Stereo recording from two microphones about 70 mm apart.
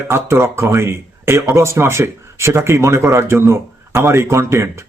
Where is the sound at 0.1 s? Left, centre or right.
Right.